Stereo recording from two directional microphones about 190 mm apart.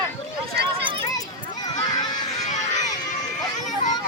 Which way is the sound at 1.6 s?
20° left (ahead or behind).